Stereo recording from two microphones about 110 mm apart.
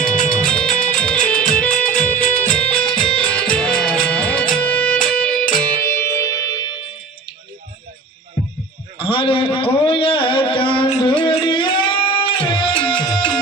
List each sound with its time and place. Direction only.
0.3 s music: 10° left (ahead or behind)
5.8 s music: 25° left (ahead or behind)
9.0 s a sound: 55° left (ahead or behind)
11.0 s music: 50° left (ahead or behind)